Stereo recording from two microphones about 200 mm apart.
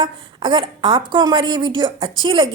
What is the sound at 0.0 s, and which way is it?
A woman's voice, 25° right (ahead or behind).